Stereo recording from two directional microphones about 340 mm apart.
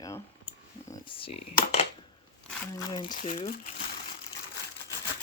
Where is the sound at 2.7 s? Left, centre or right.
Centre.